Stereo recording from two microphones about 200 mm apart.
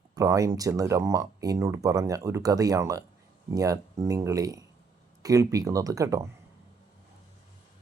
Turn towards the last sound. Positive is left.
turn(degrees=-15)  # may be behind; listen again after turning